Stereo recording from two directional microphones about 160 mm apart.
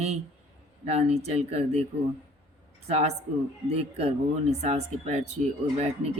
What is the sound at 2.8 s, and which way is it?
Speech, 40° right (ahead or behind).